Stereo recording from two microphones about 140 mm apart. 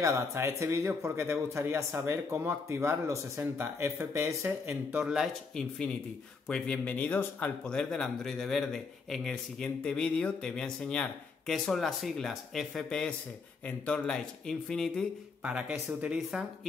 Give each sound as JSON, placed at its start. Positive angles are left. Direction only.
{"t": 0.0, "sound": "speech", "side_deg": -20}
{"t": 4.9, "sound": "speech", "side_deg": -5}
{"t": 15.4, "sound": "speech", "side_deg": -10}